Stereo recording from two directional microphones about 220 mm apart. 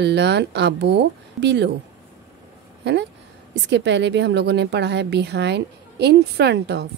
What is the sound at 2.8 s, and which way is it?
Speech, 50° right (ahead or behind).